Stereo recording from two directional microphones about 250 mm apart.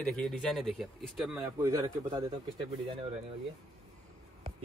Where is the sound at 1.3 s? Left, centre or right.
Centre.